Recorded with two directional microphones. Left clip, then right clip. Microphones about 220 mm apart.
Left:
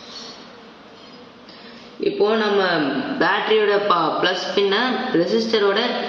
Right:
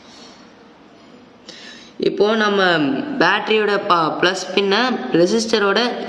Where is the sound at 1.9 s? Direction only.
55° right (ahead or behind).